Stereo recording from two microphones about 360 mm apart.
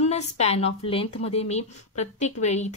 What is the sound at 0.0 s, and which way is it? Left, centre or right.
A woman's voice, centre.